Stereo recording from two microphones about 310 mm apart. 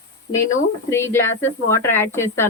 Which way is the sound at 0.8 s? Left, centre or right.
Centre.